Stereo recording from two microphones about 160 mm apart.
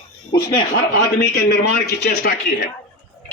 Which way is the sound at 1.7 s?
85° left.